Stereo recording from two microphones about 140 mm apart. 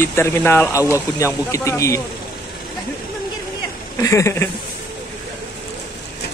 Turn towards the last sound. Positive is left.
turn(degrees=20)  # may be behind; listen again after turning